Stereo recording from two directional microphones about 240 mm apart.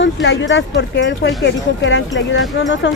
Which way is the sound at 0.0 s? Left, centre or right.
Left.